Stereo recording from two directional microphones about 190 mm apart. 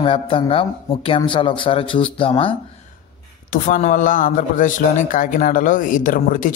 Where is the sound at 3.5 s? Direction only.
40° left (ahead or behind).